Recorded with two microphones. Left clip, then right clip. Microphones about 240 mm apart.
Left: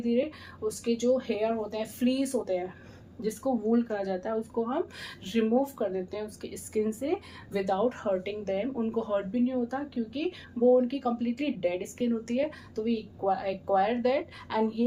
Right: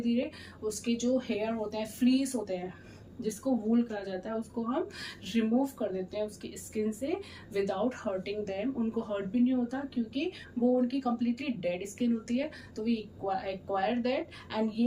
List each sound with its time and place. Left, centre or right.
0.6 s speech: centre
3.7 s speech: centre